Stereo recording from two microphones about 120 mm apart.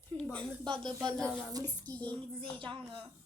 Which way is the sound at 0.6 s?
40° right (ahead or behind).